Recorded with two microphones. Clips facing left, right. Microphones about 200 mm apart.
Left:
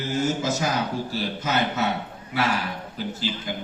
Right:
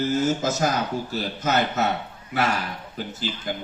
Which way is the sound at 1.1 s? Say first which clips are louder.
Right 4 dB; 45° right (ahead or behind).